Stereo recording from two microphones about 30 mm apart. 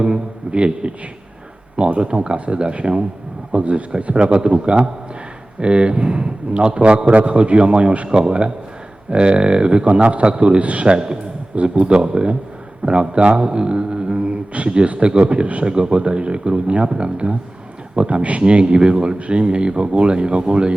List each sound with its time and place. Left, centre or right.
0.0 s a man's voice: right
10.8 s a man's voice: right
11.5 s a man's voice: right
18.4 s speech: right